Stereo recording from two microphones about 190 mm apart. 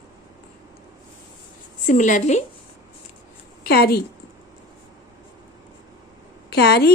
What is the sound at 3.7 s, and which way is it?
Speech, 55° left (ahead or behind).